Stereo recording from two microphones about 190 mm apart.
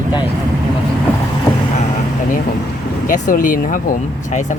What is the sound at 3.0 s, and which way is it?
Speech, 45° left (ahead or behind).